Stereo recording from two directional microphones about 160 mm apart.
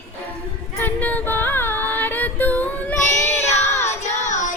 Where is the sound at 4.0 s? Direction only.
50° left (ahead or behind).